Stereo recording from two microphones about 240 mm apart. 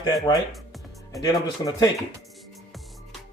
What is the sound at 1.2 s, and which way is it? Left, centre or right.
Speech, centre.